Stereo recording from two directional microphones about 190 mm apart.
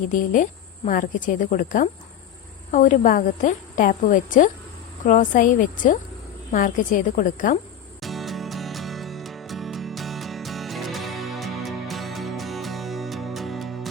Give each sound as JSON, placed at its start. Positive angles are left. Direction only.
{"t": 0.1, "sound": "a woman's voice", "side_deg": 45}
{"t": 8.0, "sound": "music", "side_deg": 0}